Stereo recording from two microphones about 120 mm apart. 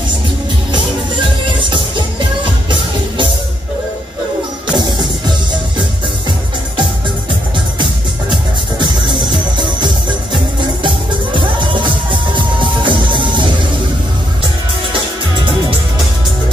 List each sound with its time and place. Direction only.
1.6 s music: 40° right (ahead or behind)
4.7 s music: 35° right (ahead or behind)
7.8 s music: 40° right (ahead or behind)